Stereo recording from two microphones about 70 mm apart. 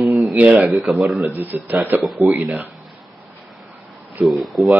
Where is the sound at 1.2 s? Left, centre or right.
Right.